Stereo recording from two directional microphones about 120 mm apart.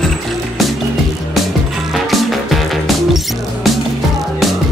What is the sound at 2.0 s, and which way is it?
Music, centre (ahead or behind).